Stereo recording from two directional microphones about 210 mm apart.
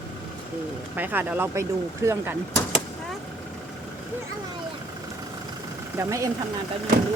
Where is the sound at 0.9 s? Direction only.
10° right (ahead or behind).